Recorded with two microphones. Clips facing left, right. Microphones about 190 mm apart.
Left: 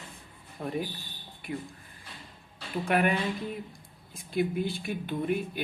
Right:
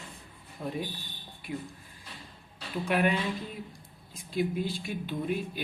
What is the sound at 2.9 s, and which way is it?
Speech, 55° left (ahead or behind).